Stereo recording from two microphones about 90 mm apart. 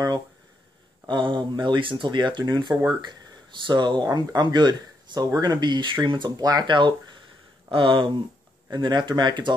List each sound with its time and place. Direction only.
1.0 s speech: 65° right (ahead or behind)
6.3 s speech: 45° right (ahead or behind)
6.7 s speech: 60° right (ahead or behind)
7.7 s speech: 70° right (ahead or behind)
8.6 s speech: 55° right (ahead or behind)